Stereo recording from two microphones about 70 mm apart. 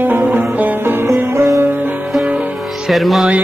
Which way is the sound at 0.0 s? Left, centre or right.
Right.